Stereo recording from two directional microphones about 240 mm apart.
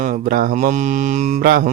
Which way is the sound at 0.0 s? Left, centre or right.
Right.